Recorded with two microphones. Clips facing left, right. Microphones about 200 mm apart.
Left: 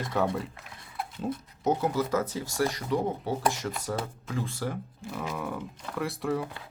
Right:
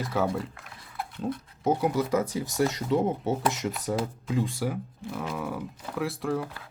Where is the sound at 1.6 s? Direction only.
10° right (ahead or behind).